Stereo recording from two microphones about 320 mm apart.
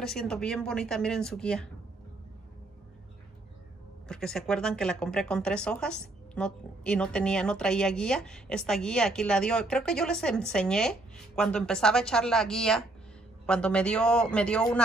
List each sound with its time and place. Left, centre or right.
0.0 s speech: centre
4.1 s speech: centre